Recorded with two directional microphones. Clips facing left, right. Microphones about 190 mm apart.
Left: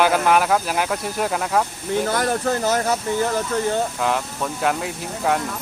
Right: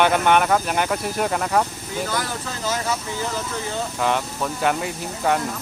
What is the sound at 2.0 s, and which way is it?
Speech, 60° left (ahead or behind).